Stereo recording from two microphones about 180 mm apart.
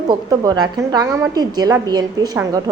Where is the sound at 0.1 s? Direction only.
20° right (ahead or behind).